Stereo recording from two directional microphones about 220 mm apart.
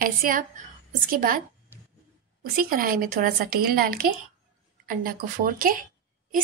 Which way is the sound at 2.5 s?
40° right (ahead or behind).